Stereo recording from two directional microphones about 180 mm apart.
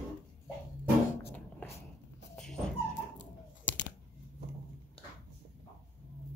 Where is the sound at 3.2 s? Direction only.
90° left.